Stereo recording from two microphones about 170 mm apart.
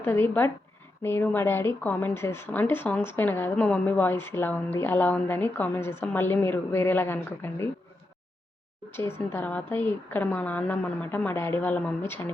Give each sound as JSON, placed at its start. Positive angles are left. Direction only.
{"t": 0.0, "sound": "speech", "side_deg": 10}
{"t": 8.9, "sound": "speech", "side_deg": 15}